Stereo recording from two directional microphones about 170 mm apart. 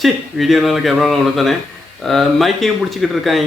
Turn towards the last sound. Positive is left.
turn(degrees=0)  # may be behind; listen again after turning